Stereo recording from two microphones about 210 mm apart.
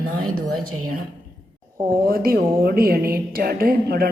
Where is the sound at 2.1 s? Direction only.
45° right (ahead or behind).